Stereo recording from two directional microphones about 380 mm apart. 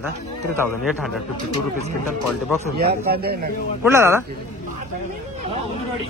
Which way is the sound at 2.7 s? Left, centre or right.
Right.